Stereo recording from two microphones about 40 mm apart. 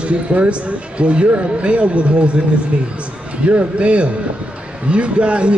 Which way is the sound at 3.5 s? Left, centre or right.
Right.